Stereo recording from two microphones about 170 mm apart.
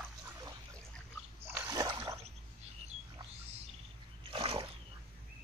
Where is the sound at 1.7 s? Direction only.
20° right (ahead or behind).